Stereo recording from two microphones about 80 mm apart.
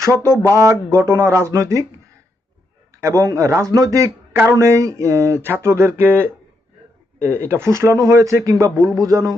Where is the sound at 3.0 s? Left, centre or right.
Right.